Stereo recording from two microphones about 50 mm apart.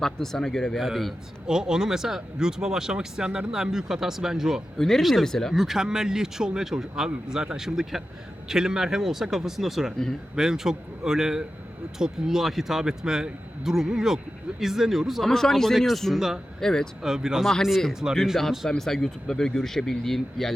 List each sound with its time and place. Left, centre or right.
0.0 s speech: centre
0.8 s a man's voice: centre
1.5 s speech: centre
4.8 s speech: centre
5.5 s speech: centre
15.3 s a man's voice: centre
17.0 s speech: centre
17.4 s a man's voice: centre